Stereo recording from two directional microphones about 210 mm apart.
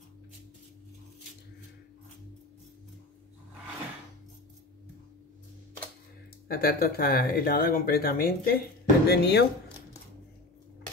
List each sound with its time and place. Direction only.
6.4 s speech: 45° left (ahead or behind)